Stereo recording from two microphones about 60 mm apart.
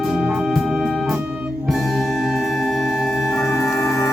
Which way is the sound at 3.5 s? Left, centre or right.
Left.